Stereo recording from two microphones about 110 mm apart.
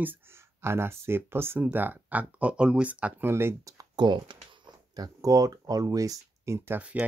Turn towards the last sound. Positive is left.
turn(degrees=-10)  # may be behind; listen again after turning